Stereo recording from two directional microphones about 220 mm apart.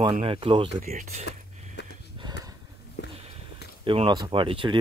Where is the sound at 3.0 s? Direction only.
50° left (ahead or behind).